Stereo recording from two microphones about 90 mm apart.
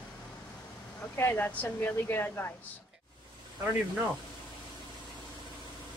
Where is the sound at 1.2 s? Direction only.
20° left (ahead or behind).